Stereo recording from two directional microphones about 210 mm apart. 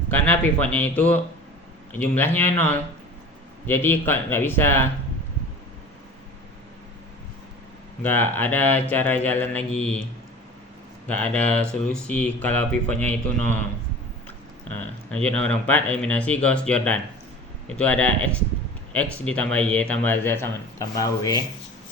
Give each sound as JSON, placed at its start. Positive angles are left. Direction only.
{"t": 0.1, "sound": "speech", "side_deg": 5}
{"t": 8.0, "sound": "speech", "side_deg": 10}
{"t": 11.1, "sound": "speech", "side_deg": 5}
{"t": 14.8, "sound": "speech", "side_deg": 5}